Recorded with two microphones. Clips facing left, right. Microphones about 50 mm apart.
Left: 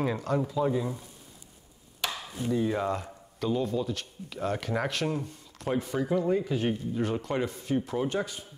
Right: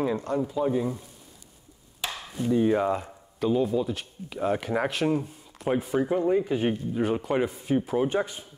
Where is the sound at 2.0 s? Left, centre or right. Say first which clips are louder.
Right 2 dB; right.